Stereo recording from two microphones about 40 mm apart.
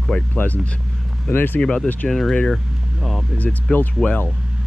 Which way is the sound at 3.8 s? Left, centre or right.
Left.